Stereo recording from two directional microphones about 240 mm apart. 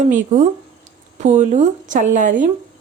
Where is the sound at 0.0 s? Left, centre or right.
Right.